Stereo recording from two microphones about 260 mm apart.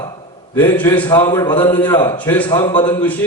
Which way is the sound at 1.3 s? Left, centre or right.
Centre.